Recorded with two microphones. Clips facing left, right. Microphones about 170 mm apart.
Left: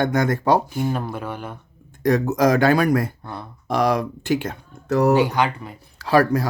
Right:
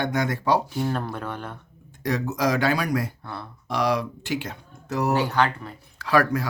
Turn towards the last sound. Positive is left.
turn(degrees=35)  # may be behind; listen again after turning